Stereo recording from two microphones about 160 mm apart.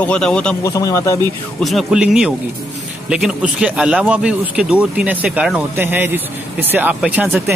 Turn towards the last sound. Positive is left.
turn(degrees=-10)  # may be behind; listen again after turning